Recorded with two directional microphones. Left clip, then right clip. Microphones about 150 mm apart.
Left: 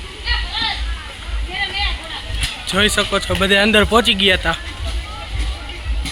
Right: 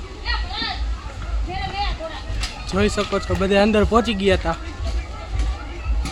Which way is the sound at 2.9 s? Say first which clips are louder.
Left 5 dB; 15° left (ahead or behind).